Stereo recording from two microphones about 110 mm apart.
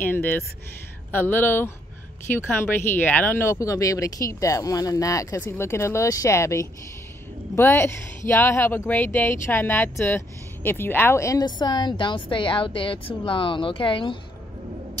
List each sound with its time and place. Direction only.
0.0 s speech: 20° left (ahead or behind)
11.4 s a woman's voice: 40° left (ahead or behind)